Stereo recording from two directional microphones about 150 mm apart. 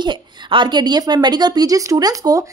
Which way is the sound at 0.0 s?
30° right (ahead or behind).